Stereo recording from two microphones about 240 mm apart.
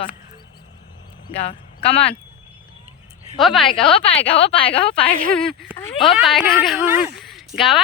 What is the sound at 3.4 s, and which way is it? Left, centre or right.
Speech, centre.